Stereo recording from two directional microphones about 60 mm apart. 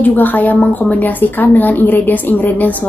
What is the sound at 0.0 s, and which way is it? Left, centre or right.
A woman's voice, left.